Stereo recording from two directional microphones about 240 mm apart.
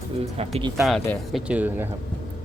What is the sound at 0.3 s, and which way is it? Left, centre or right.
Speech, right.